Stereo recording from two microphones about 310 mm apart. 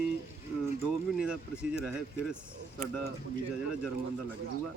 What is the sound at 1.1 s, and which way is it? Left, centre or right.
Speech, centre.